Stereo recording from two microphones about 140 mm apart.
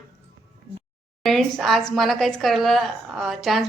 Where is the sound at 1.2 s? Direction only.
5° left (ahead or behind).